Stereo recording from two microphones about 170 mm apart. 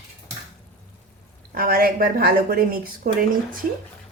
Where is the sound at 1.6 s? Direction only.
60° right (ahead or behind).